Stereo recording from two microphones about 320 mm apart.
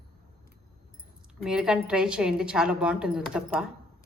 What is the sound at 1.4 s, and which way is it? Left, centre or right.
A woman's voice, centre.